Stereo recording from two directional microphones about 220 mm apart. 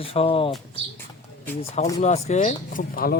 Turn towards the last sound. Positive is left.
turn(degrees=40)  # may be behind; listen again after turning